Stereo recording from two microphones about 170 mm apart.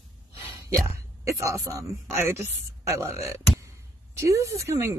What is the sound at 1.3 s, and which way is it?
Speech, 20° right (ahead or behind).